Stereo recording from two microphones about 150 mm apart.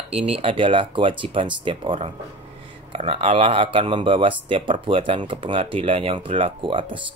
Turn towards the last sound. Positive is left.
turn(degrees=-35)  # may be behind; listen again after turning